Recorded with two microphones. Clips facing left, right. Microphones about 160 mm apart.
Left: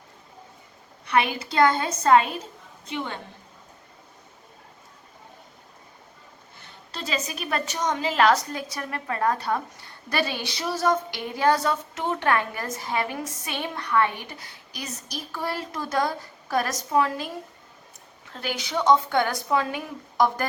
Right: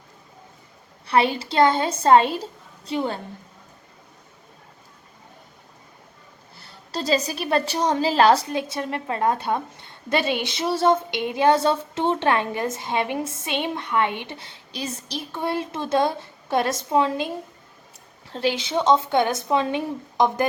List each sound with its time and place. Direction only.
1.0 s a woman's voice: 30° right (ahead or behind)
6.6 s a woman's voice: 35° right (ahead or behind); by 20.5 s 20° right (ahead or behind)